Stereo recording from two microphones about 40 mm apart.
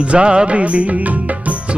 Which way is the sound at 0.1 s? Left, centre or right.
Right.